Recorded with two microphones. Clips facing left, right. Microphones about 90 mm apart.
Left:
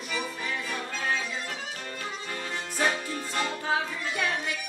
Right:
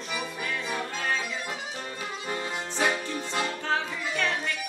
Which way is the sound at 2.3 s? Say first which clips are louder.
Right 3 dB; 20° right (ahead or behind).